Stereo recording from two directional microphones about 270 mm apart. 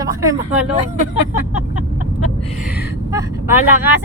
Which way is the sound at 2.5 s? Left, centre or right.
Centre.